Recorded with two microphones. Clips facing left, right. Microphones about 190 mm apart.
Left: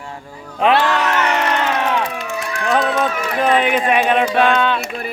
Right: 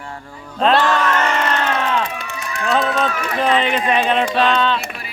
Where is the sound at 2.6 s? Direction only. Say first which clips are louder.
Left 1 dB; 15° left (ahead or behind).